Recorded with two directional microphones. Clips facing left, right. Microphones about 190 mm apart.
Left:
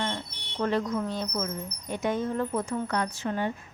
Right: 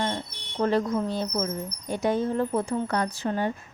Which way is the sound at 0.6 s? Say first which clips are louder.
Right 3 dB; 35° right (ahead or behind).